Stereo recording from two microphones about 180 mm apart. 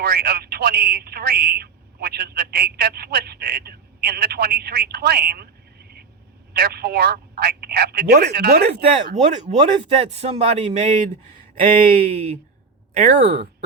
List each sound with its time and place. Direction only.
0.0 s speech: 60° right (ahead or behind)
6.5 s speech: 60° right (ahead or behind)
9.2 s a man's voice: 40° right (ahead or behind)